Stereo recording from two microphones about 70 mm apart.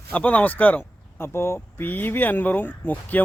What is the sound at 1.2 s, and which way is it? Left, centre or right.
A man's voice, left.